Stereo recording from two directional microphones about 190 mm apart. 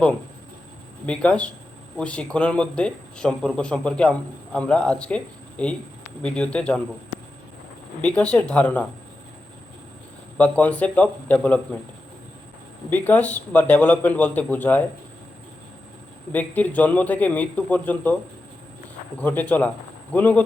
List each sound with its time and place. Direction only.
1.0 s a man's voice: 5° left (ahead or behind)
8.3 s a man's voice: 5° left (ahead or behind)
10.3 s a man's voice: 10° left (ahead or behind)
12.9 s a man's voice: 10° left (ahead or behind)
16.3 s a man's voice: 10° left (ahead or behind)
19.2 s a man's voice: 10° left (ahead or behind)